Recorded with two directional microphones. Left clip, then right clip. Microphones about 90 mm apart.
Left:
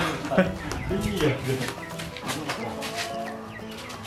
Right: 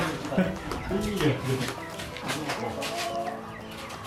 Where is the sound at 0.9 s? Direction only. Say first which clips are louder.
Left 2 dB; 20° left (ahead or behind).